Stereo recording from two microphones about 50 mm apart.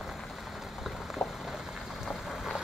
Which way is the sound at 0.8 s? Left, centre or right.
Centre.